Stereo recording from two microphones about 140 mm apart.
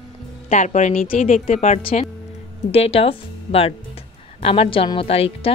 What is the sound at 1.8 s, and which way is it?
A woman's voice, 40° left (ahead or behind).